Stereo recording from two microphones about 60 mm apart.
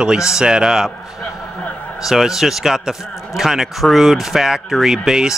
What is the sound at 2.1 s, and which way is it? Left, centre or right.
Speech, centre.